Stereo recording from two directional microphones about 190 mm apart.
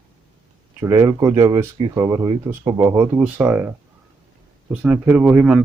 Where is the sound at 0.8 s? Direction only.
15° right (ahead or behind).